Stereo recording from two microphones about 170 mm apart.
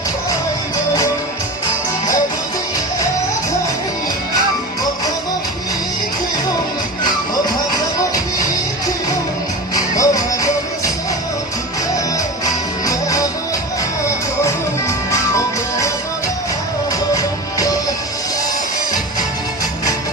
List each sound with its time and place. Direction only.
10.0 s music: 20° left (ahead or behind)
12.8 s music: 20° left (ahead or behind)
14.4 s music: 15° left (ahead or behind)